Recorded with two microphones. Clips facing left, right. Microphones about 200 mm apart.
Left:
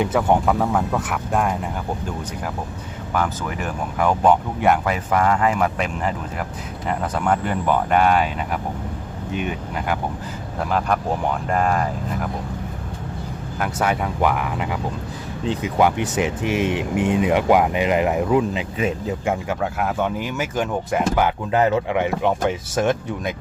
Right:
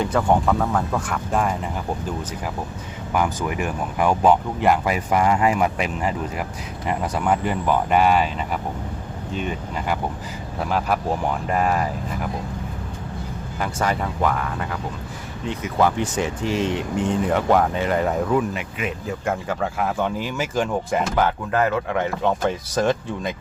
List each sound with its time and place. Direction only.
0.1 s speech: 5° left (ahead or behind)
3.1 s speech: 15° right (ahead or behind)
10.6 s speech: 5° right (ahead or behind)
13.6 s speech: 5° left (ahead or behind)
15.8 s speech: 15° left (ahead or behind)
18.5 s speech: 25° left (ahead or behind)
19.2 s speech: 10° left (ahead or behind)